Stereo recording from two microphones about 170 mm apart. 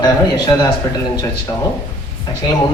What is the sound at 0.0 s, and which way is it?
Speech, 25° left (ahead or behind).